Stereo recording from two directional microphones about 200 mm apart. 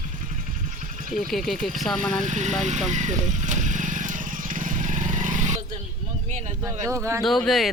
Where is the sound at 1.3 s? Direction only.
Centre (ahead or behind).